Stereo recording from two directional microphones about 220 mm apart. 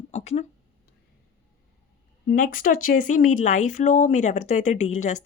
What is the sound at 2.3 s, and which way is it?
Speech, 40° left (ahead or behind).